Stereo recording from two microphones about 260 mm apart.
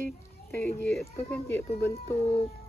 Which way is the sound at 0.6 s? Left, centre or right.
Centre.